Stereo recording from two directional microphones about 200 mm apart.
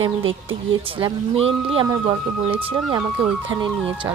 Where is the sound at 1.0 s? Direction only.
25° right (ahead or behind).